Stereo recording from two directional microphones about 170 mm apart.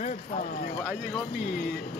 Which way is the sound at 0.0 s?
45° left (ahead or behind).